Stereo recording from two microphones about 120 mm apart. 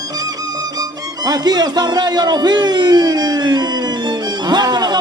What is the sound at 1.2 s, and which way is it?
Speech, 35° right (ahead or behind).